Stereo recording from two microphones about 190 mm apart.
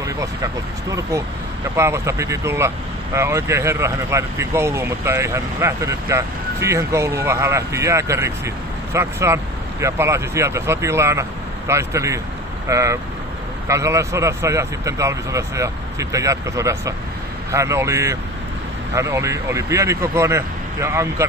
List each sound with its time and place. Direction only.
0.0 s speech: 15° right (ahead or behind)